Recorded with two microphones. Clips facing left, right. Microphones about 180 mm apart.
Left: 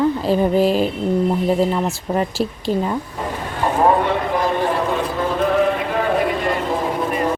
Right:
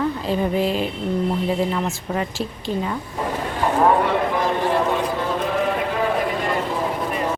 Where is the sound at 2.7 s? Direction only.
45° left (ahead or behind).